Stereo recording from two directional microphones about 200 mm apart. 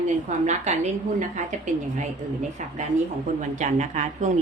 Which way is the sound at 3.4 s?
35° right (ahead or behind).